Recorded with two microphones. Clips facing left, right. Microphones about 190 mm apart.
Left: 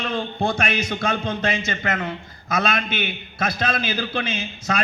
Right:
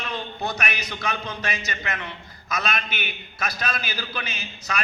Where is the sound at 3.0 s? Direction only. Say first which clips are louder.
Left 6 dB; 55° left (ahead or behind).